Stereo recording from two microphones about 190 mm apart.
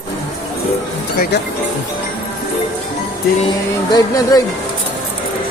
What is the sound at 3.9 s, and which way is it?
Speech, 20° left (ahead or behind).